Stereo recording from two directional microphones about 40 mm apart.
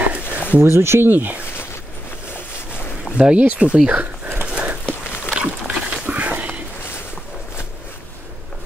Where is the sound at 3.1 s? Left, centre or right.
Right.